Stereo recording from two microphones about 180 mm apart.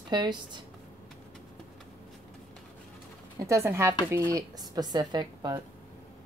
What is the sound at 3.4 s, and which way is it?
A woman's voice, 15° right (ahead or behind).